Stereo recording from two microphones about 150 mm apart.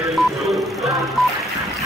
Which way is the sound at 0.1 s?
Centre (ahead or behind).